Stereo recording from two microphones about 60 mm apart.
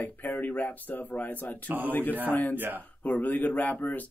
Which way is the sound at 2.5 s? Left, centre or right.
Right.